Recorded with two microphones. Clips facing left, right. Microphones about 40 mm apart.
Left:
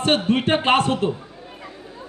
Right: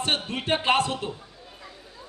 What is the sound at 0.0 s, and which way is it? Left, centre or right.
A man's voice, left.